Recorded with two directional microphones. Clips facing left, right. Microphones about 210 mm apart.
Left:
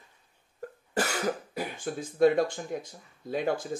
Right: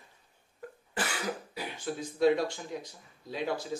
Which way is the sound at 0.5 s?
45° left (ahead or behind).